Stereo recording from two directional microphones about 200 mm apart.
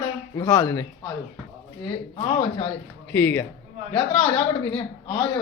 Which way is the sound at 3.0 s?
10° left (ahead or behind).